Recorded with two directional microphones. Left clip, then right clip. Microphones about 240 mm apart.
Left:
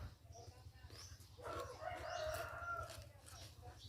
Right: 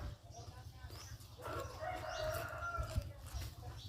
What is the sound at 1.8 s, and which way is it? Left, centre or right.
Bird, right.